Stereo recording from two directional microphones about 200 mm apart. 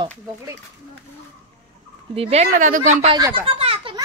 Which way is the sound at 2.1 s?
30° right (ahead or behind).